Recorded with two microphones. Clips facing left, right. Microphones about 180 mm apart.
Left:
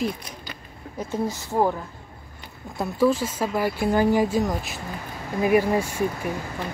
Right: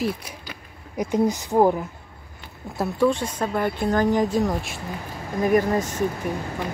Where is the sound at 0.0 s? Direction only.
10° right (ahead or behind).